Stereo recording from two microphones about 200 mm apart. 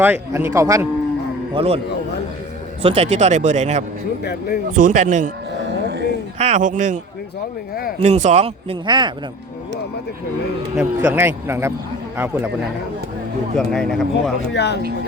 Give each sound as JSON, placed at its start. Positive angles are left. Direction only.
{"t": 0.0, "sound": "speech", "side_deg": -10}
{"t": 1.5, "sound": "speech", "side_deg": -30}
{"t": 2.8, "sound": "speech", "side_deg": -30}
{"t": 4.2, "sound": "speech", "side_deg": 50}
{"t": 4.7, "sound": "speech", "side_deg": -40}
{"t": 6.4, "sound": "speech", "side_deg": -35}
{"t": 10.8, "sound": "speech", "side_deg": -10}
{"t": 13.6, "sound": "speech", "side_deg": 5}
{"t": 14.5, "sound": "speech", "side_deg": 55}